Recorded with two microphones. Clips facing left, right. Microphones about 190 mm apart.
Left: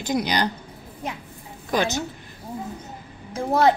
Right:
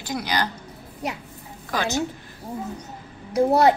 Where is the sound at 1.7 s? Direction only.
15° left (ahead or behind).